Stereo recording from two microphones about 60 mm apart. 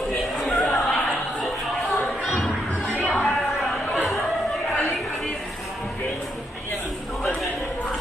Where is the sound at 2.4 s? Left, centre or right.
Centre.